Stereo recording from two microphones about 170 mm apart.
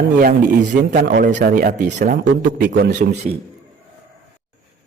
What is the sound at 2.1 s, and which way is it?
Speech, 70° right (ahead or behind).